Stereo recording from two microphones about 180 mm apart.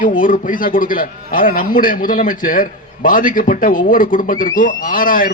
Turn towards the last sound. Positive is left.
turn(degrees=50)  # may be behind; listen again after turning